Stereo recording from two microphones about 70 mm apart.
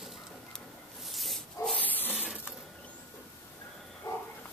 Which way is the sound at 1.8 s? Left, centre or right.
Left.